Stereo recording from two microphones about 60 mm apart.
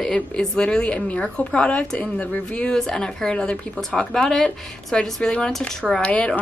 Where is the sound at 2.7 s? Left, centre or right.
Centre.